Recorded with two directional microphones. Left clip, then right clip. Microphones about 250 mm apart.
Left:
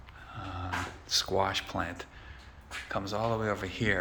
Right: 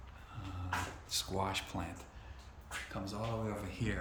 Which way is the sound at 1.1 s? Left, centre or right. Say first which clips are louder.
Left 10 dB; centre.